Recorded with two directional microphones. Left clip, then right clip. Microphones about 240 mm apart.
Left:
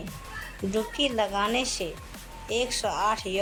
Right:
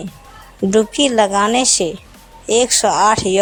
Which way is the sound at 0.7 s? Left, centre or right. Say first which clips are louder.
Right 13 dB; right.